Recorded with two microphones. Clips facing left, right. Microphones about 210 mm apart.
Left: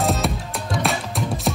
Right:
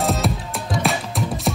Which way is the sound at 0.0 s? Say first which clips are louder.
Even; centre (ahead or behind).